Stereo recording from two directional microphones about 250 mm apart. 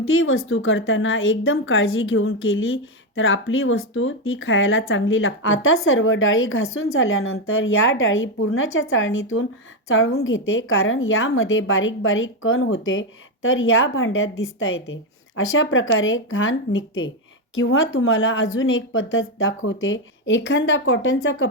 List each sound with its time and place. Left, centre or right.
0.0 s speech: left